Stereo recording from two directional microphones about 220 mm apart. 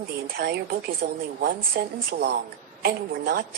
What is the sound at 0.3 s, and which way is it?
A woman's voice, 45° right (ahead or behind).